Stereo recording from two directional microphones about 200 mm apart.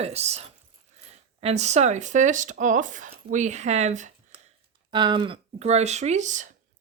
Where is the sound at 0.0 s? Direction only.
30° right (ahead or behind).